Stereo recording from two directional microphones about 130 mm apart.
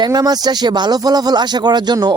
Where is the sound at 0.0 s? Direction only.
30° right (ahead or behind).